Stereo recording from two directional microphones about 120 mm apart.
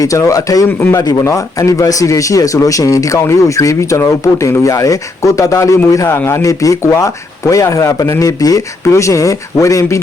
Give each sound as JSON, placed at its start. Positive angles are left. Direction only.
{"t": 0.0, "sound": "speech", "side_deg": 30}